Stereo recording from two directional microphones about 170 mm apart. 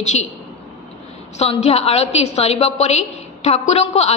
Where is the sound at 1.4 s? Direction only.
35° left (ahead or behind).